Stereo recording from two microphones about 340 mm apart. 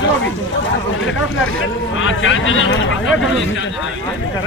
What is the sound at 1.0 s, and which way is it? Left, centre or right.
Speech, left.